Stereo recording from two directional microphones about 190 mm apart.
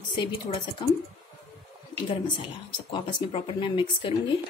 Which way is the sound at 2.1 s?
25° left (ahead or behind).